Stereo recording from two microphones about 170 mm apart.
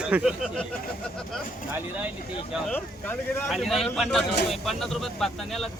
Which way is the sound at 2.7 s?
10° left (ahead or behind).